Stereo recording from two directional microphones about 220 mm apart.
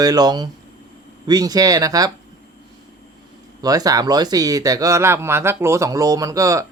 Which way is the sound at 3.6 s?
15° right (ahead or behind).